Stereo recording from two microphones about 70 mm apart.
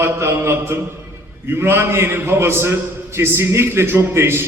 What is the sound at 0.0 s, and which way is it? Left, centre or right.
A man's voice, right.